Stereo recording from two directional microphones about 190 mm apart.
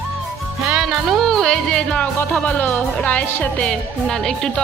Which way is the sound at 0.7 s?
Centre (ahead or behind).